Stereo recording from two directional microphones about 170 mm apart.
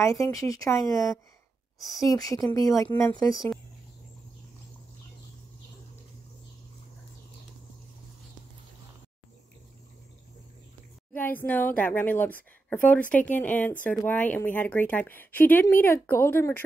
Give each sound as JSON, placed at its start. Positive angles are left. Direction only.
{"t": 0.3, "sound": "speech", "side_deg": 20}
{"t": 11.1, "sound": "speech", "side_deg": 10}